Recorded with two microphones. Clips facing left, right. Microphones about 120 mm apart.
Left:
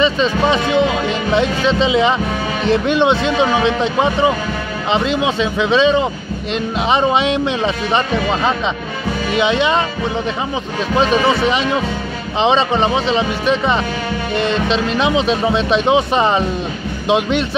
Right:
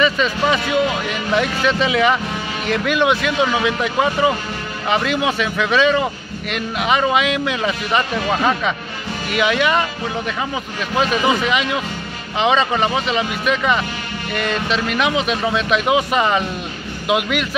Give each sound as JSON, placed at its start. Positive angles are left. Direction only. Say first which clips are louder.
{"t": 0.0, "sound": "speech", "louder": "left 3 dB", "side_deg": 25}
{"t": 11.0, "sound": "speech", "louder": "left 3 dB", "side_deg": 35}